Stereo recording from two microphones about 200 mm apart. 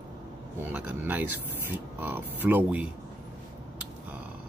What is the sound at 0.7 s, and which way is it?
Speech, 10° right (ahead or behind).